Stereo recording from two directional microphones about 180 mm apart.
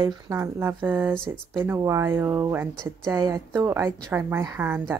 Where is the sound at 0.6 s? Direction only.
10° right (ahead or behind).